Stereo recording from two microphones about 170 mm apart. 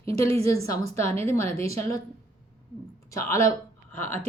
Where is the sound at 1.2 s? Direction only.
15° left (ahead or behind).